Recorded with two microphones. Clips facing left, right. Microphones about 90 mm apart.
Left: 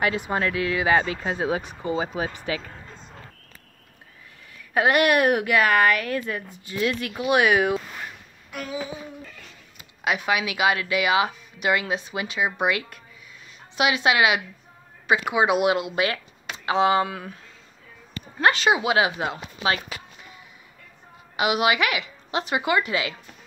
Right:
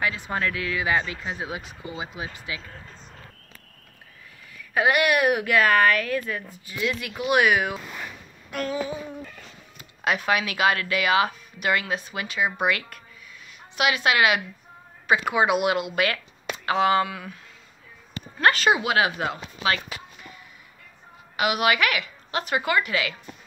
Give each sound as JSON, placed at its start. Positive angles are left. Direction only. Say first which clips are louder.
{"t": 0.0, "sound": "a woman's voice", "louder": "left 3 dB", "side_deg": 20}
{"t": 4.7, "sound": "speech", "louder": "left 2 dB", "side_deg": 35}
{"t": 5.5, "sound": "speech", "louder": "right 3 dB", "side_deg": 15}
{"t": 6.8, "sound": "speech", "louder": "left 3 dB", "side_deg": 40}
{"t": 7.2, "sound": "a woman's voice", "louder": "left 1 dB", "side_deg": 20}
{"t": 8.5, "sound": "a sound", "louder": "right 5 dB", "side_deg": 5}
{"t": 10.0, "sound": "a woman's voice", "louder": "even", "side_deg": 10}
{"t": 18.4, "sound": "a woman's voice", "louder": "even", "side_deg": 20}
{"t": 21.4, "sound": "a woman's voice", "louder": "left 1 dB", "side_deg": 20}